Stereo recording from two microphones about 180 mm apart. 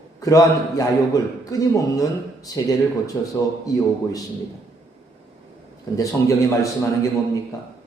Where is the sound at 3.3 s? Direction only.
20° left (ahead or behind).